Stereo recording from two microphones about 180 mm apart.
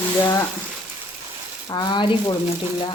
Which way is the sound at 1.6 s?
25° left (ahead or behind).